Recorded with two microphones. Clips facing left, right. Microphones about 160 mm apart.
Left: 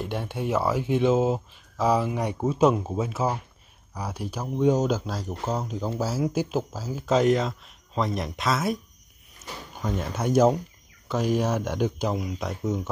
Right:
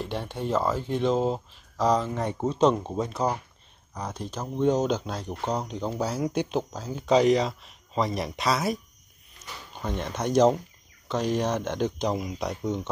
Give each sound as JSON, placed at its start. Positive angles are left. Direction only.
{"t": 0.0, "sound": "speech", "side_deg": 0}
{"t": 9.8, "sound": "speech", "side_deg": 5}